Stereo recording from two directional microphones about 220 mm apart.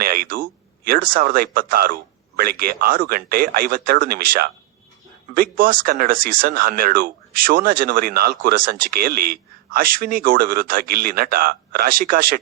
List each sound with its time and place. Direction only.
0.0 s speech: 40° right (ahead or behind)